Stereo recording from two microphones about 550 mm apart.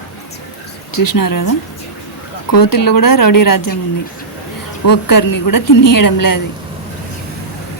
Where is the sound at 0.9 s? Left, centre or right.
Left.